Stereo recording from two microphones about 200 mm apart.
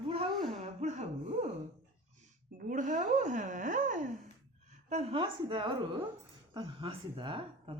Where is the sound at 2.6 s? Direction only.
40° right (ahead or behind).